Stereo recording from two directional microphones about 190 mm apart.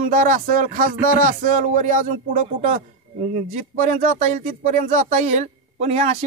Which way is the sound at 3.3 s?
40° right (ahead or behind).